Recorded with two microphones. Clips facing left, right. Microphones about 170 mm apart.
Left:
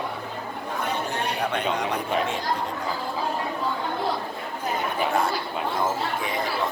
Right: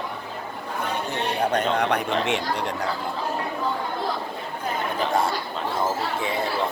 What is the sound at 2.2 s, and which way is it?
Chatter, 75° right (ahead or behind).